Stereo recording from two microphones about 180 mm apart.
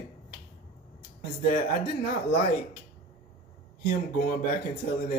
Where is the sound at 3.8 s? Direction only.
55° left (ahead or behind).